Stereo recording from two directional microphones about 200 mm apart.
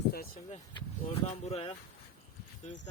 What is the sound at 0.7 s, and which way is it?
Speech, 30° left (ahead or behind).